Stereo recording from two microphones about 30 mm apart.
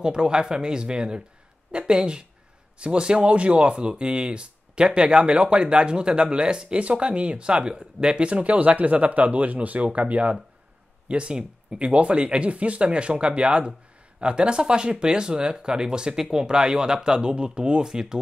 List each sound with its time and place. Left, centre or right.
0.0 s speech: right
3.3 s speech: right
6.8 s speech: right
11.1 s speech: right